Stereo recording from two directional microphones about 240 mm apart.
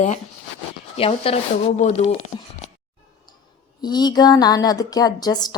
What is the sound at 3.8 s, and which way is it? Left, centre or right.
A woman's voice, centre.